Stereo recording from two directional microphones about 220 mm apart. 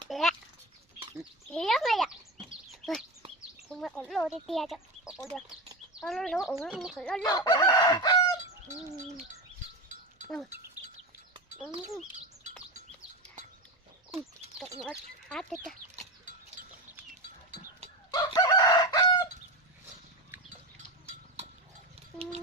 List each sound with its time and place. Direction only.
0.1 s a sound: centre (ahead or behind)
3.7 s speech: 5° left (ahead or behind)
7.3 s chicken: 20° left (ahead or behind)
14.8 s speech: 5° left (ahead or behind)
17.1 s livestock: 35° right (ahead or behind)
18.1 s chicken: 20° left (ahead or behind)